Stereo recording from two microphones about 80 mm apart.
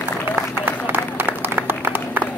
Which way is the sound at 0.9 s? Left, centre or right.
Right.